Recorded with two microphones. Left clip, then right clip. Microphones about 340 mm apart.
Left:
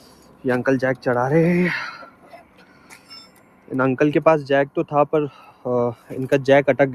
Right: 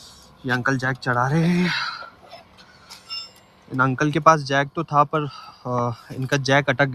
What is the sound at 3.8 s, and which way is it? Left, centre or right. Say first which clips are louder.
Speech: left 2 dB; centre.